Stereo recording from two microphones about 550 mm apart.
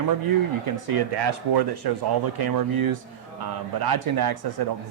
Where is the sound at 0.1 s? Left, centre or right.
Right.